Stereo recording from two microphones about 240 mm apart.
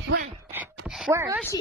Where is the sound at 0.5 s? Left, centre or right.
Centre.